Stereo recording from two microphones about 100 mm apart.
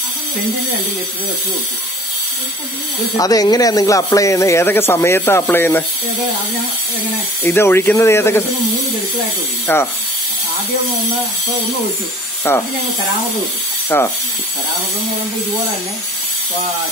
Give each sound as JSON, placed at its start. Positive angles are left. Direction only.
{"t": 3.2, "sound": "speech", "side_deg": 40}
{"t": 7.4, "sound": "speech", "side_deg": 25}
{"t": 9.7, "sound": "speech", "side_deg": 20}
{"t": 12.5, "sound": "speech", "side_deg": 25}
{"t": 13.8, "sound": "speech", "side_deg": 20}